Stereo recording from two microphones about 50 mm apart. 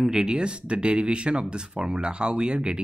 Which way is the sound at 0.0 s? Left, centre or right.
Centre.